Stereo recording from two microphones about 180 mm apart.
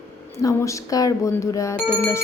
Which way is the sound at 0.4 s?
20° left (ahead or behind).